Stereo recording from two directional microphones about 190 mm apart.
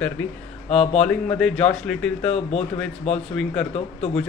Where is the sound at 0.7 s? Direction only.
35° left (ahead or behind).